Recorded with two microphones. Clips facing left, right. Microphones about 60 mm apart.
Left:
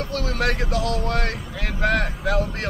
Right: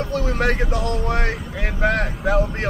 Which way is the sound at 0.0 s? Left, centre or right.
Centre.